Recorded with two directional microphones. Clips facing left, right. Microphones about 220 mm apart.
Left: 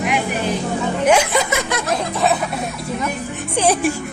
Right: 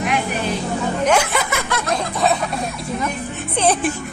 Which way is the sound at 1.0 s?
15° left (ahead or behind).